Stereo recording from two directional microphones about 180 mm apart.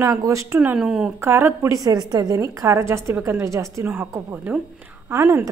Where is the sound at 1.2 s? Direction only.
15° right (ahead or behind).